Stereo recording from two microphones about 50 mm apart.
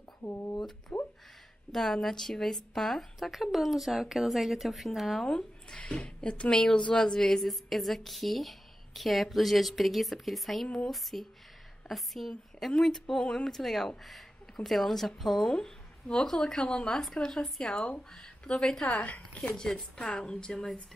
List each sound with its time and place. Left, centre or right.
0.2 s a sound: left
0.9 s a sound: centre
1.7 s a woman's voice: centre
5.2 s a woman's voice: centre
15.4 s speech: centre
18.9 s a woman's voice: left
19.5 s speech: centre